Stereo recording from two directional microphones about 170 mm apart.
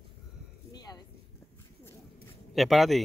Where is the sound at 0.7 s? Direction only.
25° left (ahead or behind).